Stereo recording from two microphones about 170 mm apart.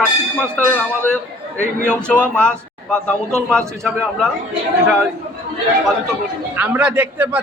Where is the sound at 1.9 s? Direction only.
5° left (ahead or behind).